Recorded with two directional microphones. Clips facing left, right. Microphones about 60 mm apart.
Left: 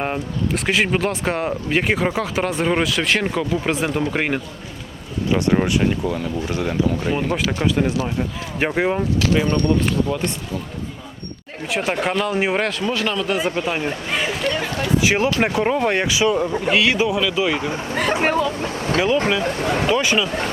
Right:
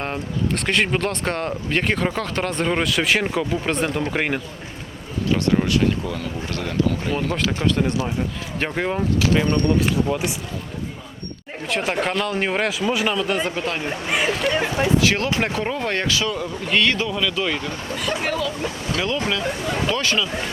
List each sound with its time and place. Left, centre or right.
0.0 s speech: centre
5.3 s speech: left
9.0 s speech: centre
11.7 s speech: centre
12.6 s speech: centre
14.1 s a sound: centre
14.5 s a sound: centre
14.9 s speech: centre
16.7 s speech: centre
17.9 s speech: left
19.5 s speech: left
19.9 s speech: centre